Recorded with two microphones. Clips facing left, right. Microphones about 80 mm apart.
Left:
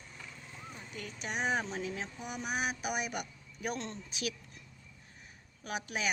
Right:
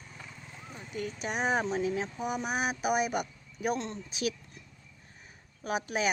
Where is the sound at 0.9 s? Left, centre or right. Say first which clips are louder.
Right 5 dB; right.